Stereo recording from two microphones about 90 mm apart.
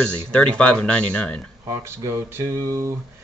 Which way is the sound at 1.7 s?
30° right (ahead or behind).